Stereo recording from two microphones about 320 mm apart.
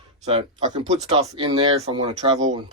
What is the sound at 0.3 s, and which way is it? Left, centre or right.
Speech, centre.